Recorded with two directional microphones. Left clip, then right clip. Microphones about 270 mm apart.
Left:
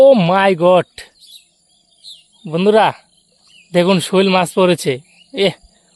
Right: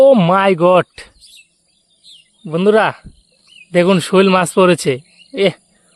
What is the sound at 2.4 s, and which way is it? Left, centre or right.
Speech, centre.